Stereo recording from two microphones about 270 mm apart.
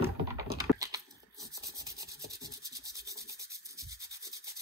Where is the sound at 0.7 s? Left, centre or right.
Centre.